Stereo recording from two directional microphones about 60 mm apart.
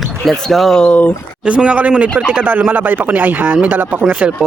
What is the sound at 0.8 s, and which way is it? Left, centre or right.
Speech, left.